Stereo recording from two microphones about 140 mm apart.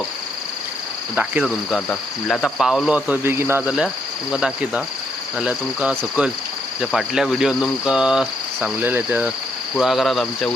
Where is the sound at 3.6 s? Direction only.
5° right (ahead or behind).